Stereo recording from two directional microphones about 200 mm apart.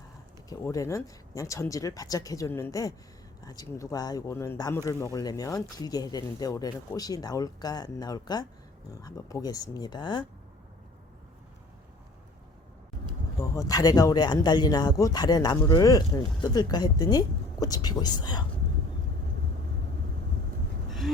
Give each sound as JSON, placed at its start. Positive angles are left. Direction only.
{"t": 0.5, "sound": "speech", "side_deg": 15}
{"t": 13.6, "sound": "speech", "side_deg": 20}
{"t": 21.0, "sound": "a sound", "side_deg": 0}